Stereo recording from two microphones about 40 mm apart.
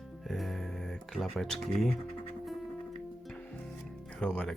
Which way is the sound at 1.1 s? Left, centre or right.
Centre.